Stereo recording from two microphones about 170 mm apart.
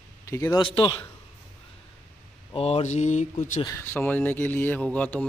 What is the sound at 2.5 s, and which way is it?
Speech, 35° left (ahead or behind).